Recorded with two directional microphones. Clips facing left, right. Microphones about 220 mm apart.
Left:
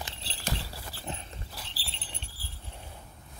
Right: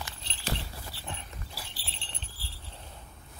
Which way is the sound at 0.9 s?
90° left.